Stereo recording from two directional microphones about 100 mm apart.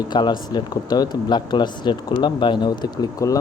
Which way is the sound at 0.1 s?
45° left (ahead or behind).